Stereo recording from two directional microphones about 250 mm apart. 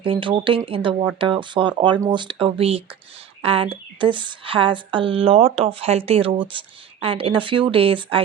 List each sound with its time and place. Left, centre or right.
0.0 s speech: centre